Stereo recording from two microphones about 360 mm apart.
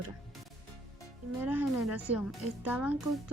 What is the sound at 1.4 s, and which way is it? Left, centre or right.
Speech, centre.